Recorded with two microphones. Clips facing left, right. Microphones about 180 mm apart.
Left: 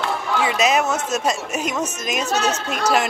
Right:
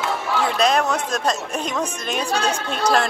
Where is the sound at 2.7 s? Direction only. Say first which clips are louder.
Right 2 dB; 10° left (ahead or behind).